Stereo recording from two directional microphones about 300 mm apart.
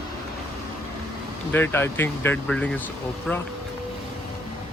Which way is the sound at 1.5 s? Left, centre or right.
Centre.